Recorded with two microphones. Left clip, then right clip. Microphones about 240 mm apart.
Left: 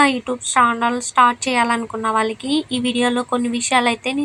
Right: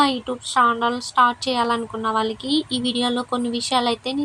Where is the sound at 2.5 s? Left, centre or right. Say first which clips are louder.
Left 2 dB; left.